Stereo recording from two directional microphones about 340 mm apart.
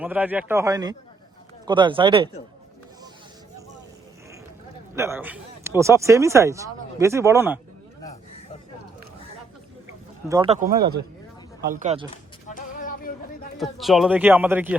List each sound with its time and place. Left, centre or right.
0.0 s speech: centre
4.9 s speech: centre
10.2 s speech: centre
12.1 s a sound: left
13.6 s speech: centre